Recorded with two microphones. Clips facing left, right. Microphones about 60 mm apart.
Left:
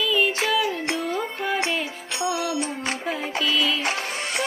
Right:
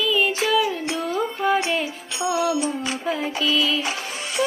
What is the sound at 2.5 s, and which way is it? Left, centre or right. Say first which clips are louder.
Music: right 3 dB; left.